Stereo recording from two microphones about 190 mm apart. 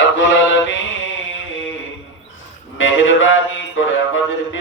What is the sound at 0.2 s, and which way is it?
Mantra, 75° left (ahead or behind).